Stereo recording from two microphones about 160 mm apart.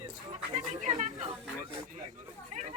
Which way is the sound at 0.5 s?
45° right (ahead or behind).